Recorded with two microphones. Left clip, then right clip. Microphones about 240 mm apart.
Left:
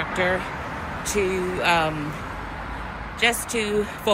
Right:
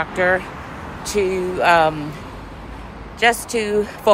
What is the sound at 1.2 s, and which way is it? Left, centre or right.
Speech, right.